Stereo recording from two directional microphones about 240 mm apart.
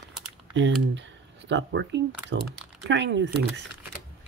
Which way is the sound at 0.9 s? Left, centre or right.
Right.